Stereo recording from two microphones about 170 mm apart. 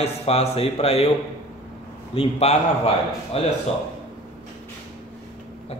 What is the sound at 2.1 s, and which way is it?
Speech, 35° left (ahead or behind).